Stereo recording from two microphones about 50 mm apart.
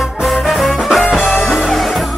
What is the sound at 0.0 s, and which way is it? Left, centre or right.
Music, centre.